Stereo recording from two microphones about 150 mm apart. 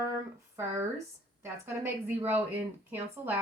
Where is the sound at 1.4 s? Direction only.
15° right (ahead or behind).